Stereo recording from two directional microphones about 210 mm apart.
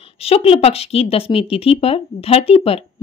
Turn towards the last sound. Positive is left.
turn(degrees=25)  # may be behind; listen again after turning